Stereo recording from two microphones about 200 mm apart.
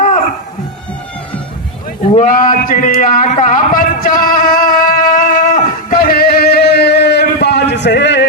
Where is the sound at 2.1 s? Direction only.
40° left (ahead or behind).